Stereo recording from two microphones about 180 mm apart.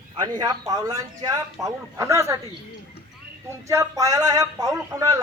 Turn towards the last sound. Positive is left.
turn(degrees=-20)  # may be behind; listen again after turning